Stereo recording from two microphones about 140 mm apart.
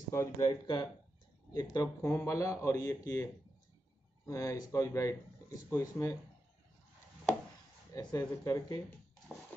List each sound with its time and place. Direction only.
0.1 s speech: 20° left (ahead or behind)
4.3 s speech: 25° left (ahead or behind)
7.9 s speech: 25° left (ahead or behind)